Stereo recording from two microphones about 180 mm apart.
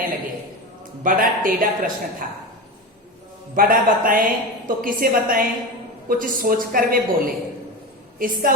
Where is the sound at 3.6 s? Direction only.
50° right (ahead or behind).